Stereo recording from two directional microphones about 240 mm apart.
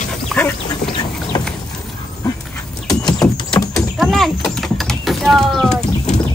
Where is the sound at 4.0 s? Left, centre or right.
Centre.